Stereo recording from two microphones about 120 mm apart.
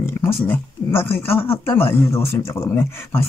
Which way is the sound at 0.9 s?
20° left (ahead or behind).